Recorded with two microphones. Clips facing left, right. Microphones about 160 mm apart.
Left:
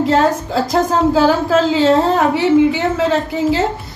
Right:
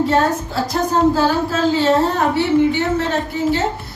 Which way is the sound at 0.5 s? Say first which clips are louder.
Left 4 dB; 90° left.